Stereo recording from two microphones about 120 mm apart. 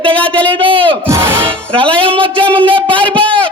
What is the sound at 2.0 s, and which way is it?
Speech, 50° right (ahead or behind).